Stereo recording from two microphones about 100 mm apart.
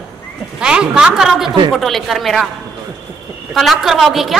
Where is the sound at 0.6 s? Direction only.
10° right (ahead or behind).